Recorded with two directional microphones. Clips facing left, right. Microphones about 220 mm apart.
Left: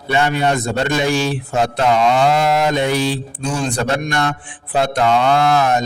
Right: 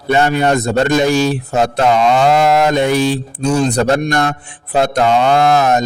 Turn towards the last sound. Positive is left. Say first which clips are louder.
# right 3 dB
turn(degrees=-40)  # may be behind; listen again after turning